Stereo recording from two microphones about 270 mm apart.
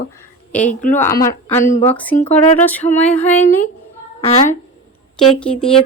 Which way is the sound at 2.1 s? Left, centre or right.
Left.